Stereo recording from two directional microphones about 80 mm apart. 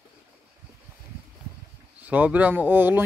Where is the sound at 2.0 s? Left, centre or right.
Centre.